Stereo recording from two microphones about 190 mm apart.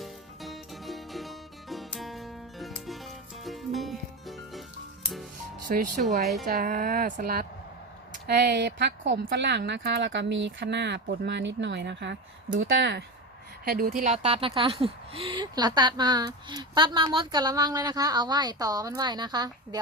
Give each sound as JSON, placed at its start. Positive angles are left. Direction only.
{"t": 0.0, "sound": "music", "side_deg": 0}
{"t": 5.7, "sound": "a woman's voice", "side_deg": -45}
{"t": 13.7, "sound": "speech", "side_deg": -50}